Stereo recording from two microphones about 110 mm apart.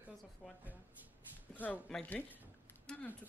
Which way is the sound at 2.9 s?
5° left (ahead or behind).